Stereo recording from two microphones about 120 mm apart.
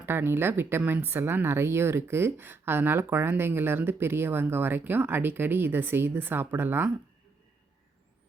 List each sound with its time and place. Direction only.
0.0 s speech: 20° right (ahead or behind)